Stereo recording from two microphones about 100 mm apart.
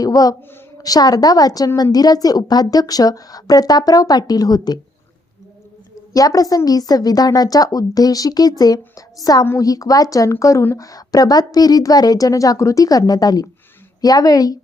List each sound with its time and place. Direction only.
0.0 s a woman's voice: 40° left (ahead or behind)
6.1 s a woman's voice: 35° left (ahead or behind)